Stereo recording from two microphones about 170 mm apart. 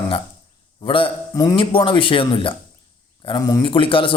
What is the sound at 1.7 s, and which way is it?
A man's voice, 30° left (ahead or behind).